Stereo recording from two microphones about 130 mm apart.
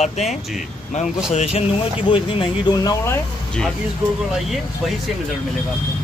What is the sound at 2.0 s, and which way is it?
Speech, 40° left (ahead or behind).